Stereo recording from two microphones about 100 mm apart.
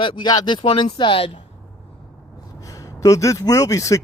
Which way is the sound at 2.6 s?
35° left (ahead or behind).